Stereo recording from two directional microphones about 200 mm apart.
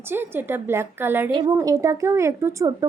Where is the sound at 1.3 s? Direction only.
25° right (ahead or behind).